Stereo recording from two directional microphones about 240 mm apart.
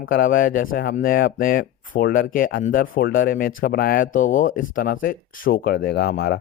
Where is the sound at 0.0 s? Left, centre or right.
Left.